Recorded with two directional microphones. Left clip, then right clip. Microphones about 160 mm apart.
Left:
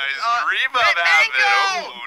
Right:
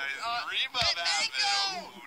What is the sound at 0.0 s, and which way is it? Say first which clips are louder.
Synthetic singing: left 13 dB; 15° left (ahead or behind).